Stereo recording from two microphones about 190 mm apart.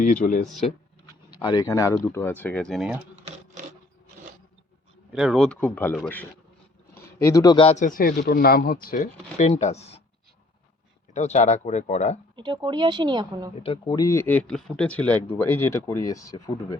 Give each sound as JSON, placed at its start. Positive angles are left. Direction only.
{"t": 0.0, "sound": "speech", "side_deg": 45}
{"t": 1.0, "sound": "a sound", "side_deg": 25}
{"t": 2.1, "sound": "speech", "side_deg": 10}
{"t": 5.1, "sound": "speech", "side_deg": 0}
{"t": 7.2, "sound": "a man's voice", "side_deg": 15}
{"t": 7.9, "sound": "speech", "side_deg": 50}
{"t": 11.1, "sound": "speech", "side_deg": 35}
{"t": 12.4, "sound": "speech", "side_deg": -25}
{"t": 13.6, "sound": "speech", "side_deg": 25}